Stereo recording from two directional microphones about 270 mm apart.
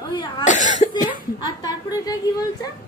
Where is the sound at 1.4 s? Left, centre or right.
Centre.